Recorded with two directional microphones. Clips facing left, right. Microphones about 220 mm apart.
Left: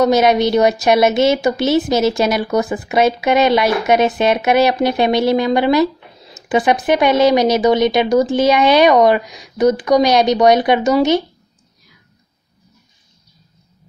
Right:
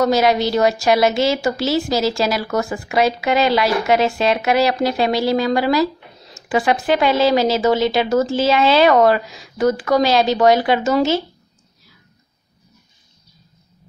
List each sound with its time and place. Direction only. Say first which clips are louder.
0.0 s a woman's voice: left 3 dB; 20° left (ahead or behind)